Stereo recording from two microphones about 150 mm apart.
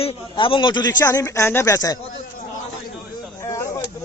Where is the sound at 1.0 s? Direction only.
20° left (ahead or behind).